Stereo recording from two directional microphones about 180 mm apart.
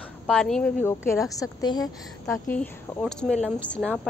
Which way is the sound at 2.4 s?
5° left (ahead or behind).